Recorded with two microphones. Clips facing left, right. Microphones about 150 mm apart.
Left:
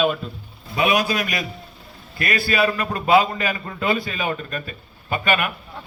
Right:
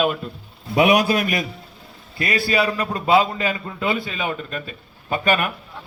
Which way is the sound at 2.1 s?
25° right (ahead or behind).